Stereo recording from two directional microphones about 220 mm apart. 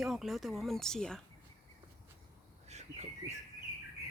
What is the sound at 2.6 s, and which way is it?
Bird, 30° right (ahead or behind).